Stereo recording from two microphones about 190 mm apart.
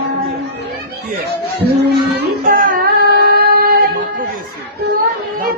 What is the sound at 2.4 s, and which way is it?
Singing, 45° right (ahead or behind).